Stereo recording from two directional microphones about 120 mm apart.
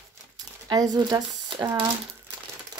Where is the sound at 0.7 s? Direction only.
35° right (ahead or behind).